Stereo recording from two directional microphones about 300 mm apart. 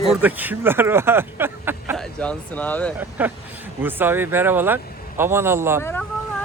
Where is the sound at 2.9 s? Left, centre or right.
Centre.